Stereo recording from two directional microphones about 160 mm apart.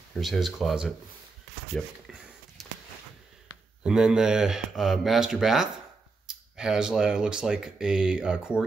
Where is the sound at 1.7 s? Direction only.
Centre (ahead or behind).